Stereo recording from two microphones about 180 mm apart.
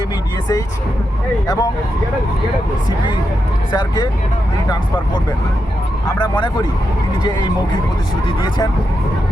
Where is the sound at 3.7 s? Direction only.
25° left (ahead or behind).